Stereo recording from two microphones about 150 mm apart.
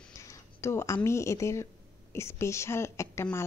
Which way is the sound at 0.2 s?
20° left (ahead or behind).